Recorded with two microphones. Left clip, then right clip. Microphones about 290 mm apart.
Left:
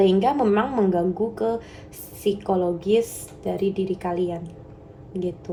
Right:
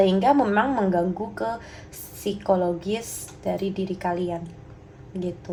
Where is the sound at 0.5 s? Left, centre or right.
Right.